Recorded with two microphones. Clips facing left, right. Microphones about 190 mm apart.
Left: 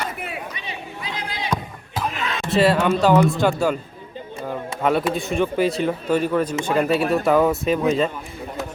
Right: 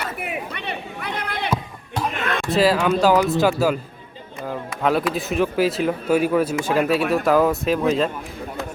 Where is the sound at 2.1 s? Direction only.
55° right (ahead or behind).